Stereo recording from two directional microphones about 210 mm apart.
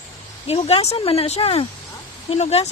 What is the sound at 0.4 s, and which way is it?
Speech, 30° left (ahead or behind).